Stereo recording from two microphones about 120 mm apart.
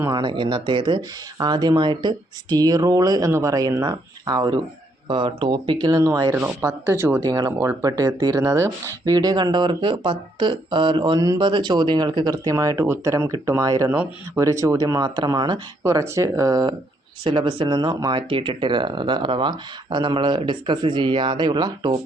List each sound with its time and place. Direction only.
0.1 s speech: 40° right (ahead or behind); by 7.2 s 20° right (ahead or behind)
7.2 s speech: 35° right (ahead or behind)
17.2 s speech: 45° right (ahead or behind)